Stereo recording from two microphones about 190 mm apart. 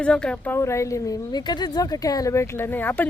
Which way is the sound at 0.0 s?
5° left (ahead or behind).